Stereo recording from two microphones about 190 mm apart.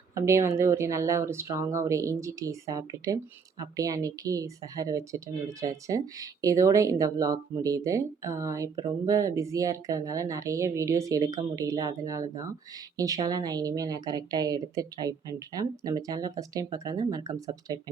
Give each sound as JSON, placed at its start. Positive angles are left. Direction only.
{"t": 0.1, "sound": "a woman's voice", "side_deg": -15}